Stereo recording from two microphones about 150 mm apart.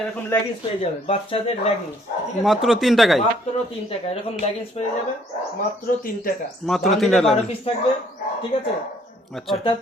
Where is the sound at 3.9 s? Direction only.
40° left (ahead or behind).